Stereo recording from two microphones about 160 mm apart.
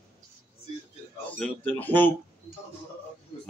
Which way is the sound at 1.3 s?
10° left (ahead or behind).